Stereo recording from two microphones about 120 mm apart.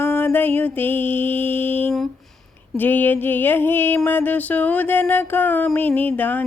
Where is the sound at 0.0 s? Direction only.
20° left (ahead or behind).